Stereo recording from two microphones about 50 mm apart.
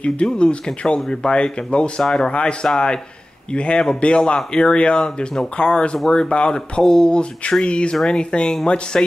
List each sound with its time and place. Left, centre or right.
0.0 s speech: left